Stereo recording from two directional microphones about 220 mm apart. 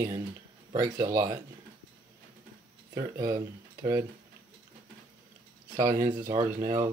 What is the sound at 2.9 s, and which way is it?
Speech, 15° right (ahead or behind).